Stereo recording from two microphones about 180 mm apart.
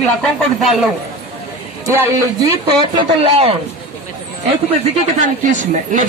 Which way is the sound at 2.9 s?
30° right (ahead or behind).